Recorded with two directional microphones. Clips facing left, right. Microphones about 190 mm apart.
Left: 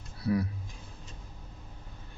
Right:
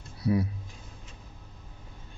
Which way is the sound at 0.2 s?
20° right (ahead or behind).